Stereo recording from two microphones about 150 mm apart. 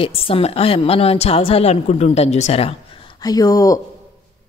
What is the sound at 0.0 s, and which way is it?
A woman's voice, 40° left (ahead or behind).